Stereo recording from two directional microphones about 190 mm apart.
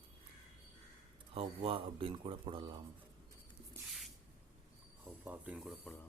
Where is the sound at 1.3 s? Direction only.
30° right (ahead or behind).